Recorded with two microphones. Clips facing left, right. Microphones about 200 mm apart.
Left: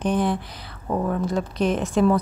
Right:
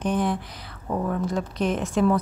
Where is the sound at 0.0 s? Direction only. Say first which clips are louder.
Left 2 dB; 30° left (ahead or behind).